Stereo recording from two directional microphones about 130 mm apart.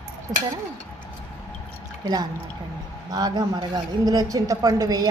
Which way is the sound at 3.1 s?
30° right (ahead or behind).